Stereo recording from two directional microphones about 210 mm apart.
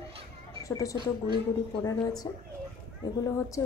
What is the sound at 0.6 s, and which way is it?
A woman's voice, 15° left (ahead or behind).